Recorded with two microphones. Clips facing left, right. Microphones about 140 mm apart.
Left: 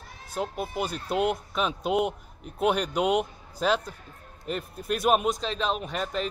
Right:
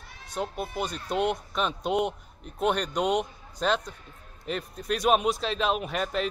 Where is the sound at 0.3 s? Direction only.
5° left (ahead or behind).